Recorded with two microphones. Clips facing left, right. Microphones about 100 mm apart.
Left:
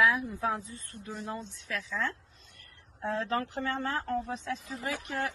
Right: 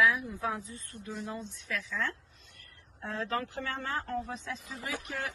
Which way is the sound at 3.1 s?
30° left (ahead or behind).